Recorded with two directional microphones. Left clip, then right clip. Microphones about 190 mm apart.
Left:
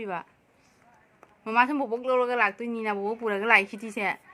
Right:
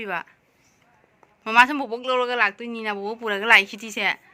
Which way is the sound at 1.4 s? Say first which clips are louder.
Right 6 dB; centre (ahead or behind).